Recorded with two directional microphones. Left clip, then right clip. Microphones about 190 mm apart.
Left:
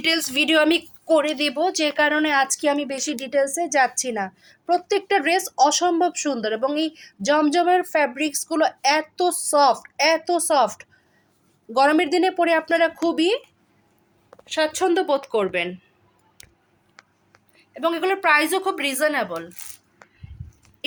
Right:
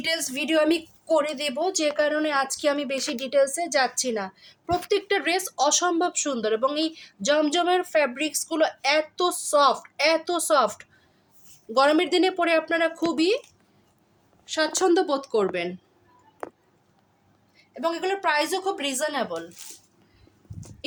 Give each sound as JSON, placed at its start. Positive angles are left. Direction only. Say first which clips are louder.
{"t": 0.0, "sound": "a woman's voice", "louder": "left 6 dB", "side_deg": 10}
{"t": 14.5, "sound": "a woman's voice", "louder": "left 1 dB", "side_deg": 0}
{"t": 17.6, "sound": "a woman's voice", "louder": "left 4 dB", "side_deg": 15}